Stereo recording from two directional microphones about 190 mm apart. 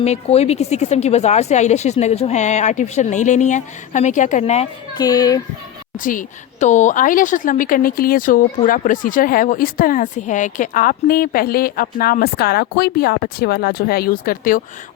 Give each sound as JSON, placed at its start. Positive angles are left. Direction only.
{"t": 0.0, "sound": "speech", "side_deg": 35}
{"t": 4.9, "sound": "speech", "side_deg": 20}
{"t": 6.0, "sound": "a woman's voice", "side_deg": 45}